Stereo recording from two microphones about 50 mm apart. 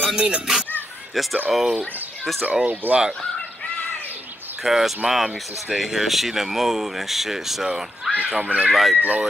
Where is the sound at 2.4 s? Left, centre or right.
Right.